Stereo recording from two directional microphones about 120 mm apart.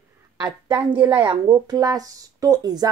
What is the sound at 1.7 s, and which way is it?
Speech, 30° right (ahead or behind).